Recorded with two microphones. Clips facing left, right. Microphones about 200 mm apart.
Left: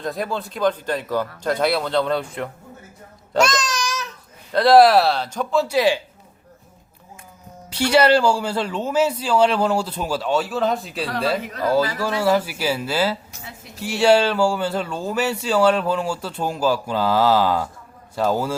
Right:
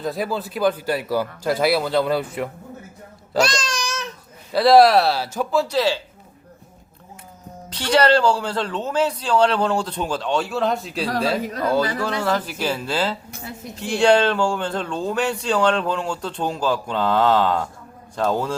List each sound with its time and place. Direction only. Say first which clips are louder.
0.0 s speech: right 1 dB; 5° right (ahead or behind)
3.4 s babbling: left 3 dB; 30° right (ahead or behind)
4.5 s speech: even; centre (ahead or behind)
5.6 s speech: left 2 dB; 15° left (ahead or behind)
7.7 s speech: left 1 dB; 10° left (ahead or behind)